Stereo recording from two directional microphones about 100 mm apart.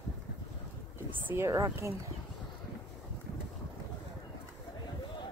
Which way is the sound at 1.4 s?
30° right (ahead or behind).